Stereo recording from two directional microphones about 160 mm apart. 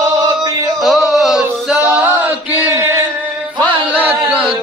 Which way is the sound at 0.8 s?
Centre (ahead or behind).